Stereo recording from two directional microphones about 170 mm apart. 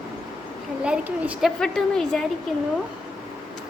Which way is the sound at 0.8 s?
5° right (ahead or behind).